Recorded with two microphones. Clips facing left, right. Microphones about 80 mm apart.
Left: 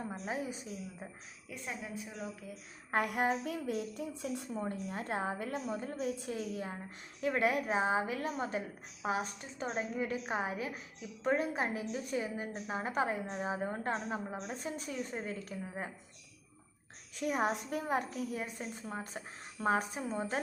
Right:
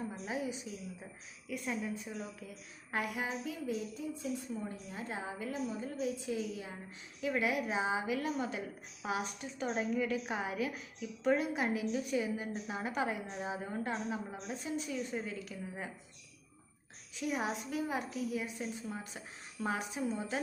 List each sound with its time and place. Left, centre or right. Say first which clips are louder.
0.3 s a woman's voice: even; left
1.5 s a woman's voice: right 5 dB; left
2.9 s a woman's voice: left 5 dB; left
17.2 s a woman's voice: left 3 dB; left